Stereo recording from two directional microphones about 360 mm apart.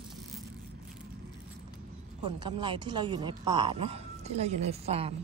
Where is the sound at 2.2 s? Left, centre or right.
Centre.